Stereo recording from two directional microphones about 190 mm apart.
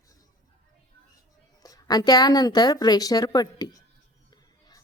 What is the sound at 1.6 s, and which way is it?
Speech, 20° left (ahead or behind).